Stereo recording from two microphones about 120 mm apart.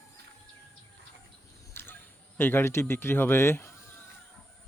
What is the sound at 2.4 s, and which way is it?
Speech, 20° left (ahead or behind).